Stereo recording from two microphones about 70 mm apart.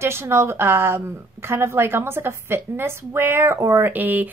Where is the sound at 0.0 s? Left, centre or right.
Right.